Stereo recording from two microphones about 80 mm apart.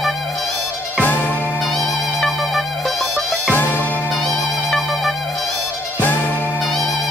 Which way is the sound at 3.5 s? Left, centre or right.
Left.